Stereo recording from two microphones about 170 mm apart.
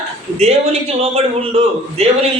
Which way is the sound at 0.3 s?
40° right (ahead or behind).